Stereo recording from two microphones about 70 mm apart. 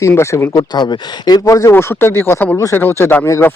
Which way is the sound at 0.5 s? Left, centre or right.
Left.